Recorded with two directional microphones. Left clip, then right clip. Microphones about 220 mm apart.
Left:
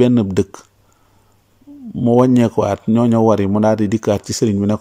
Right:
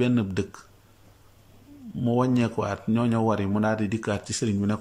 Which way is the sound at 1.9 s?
30° left (ahead or behind).